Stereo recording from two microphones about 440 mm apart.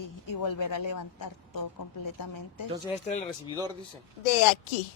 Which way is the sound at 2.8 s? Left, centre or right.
Centre.